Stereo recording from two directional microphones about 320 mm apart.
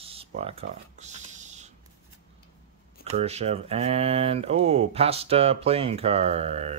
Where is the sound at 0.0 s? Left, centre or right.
Centre.